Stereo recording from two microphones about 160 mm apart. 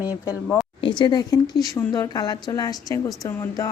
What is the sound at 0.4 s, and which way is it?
Speech, 5° left (ahead or behind).